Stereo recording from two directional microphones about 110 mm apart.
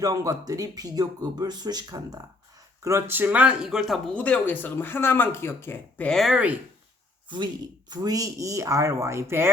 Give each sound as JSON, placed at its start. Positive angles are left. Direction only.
{"t": 0.0, "sound": "speech", "side_deg": -30}
{"t": 2.8, "sound": "speech", "side_deg": -25}
{"t": 4.1, "sound": "speech", "side_deg": 10}
{"t": 6.1, "sound": "speech", "side_deg": 0}
{"t": 7.3, "sound": "speech", "side_deg": -45}